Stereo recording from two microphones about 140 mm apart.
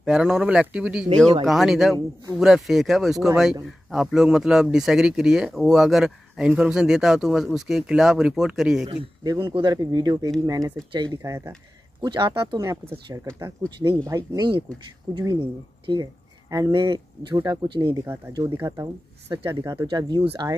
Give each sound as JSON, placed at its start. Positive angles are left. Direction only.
{"t": 0.0, "sound": "speech", "side_deg": -5}
{"t": 8.8, "sound": "speech", "side_deg": -30}
{"t": 17.9, "sound": "speech", "side_deg": -20}